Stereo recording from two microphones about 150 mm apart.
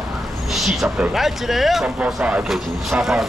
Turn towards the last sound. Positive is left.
turn(degrees=0)  # may be behind; listen again after turning